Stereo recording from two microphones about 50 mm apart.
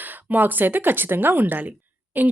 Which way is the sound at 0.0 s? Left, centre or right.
Right.